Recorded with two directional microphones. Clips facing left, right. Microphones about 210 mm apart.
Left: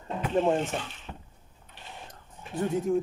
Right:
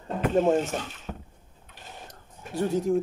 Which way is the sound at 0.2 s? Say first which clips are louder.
Right 3 dB; 45° right (ahead or behind).